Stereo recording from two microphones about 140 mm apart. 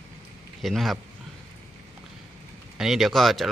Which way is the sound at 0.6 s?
Centre (ahead or behind).